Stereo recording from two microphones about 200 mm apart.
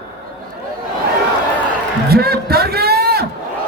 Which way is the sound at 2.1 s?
50° right (ahead or behind).